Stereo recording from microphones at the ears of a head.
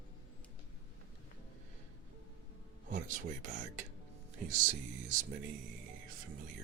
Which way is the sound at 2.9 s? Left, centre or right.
Right.